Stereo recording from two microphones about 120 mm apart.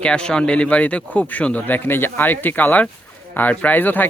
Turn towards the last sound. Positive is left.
turn(degrees=15)  # may be behind; listen again after turning